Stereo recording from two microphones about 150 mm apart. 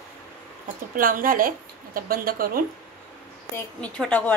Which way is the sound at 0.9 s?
70° right (ahead or behind).